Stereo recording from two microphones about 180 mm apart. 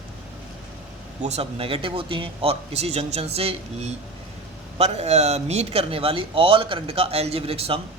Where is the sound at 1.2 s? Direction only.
35° right (ahead or behind).